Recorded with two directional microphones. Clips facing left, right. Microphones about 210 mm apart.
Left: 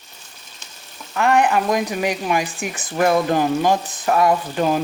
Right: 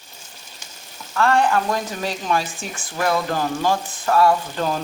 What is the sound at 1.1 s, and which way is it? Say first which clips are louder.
Speech: left 1 dB; 15° left (ahead or behind).